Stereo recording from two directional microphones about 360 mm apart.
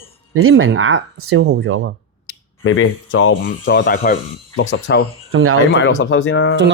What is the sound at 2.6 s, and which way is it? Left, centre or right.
Speech, left.